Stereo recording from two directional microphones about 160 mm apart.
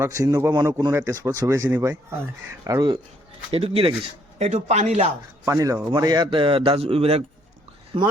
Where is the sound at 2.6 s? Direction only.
25° right (ahead or behind).